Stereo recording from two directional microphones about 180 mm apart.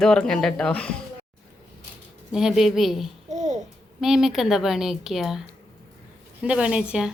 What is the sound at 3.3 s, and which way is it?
Babbling, 40° right (ahead or behind).